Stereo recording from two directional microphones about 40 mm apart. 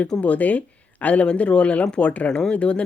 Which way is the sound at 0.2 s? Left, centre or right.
Left.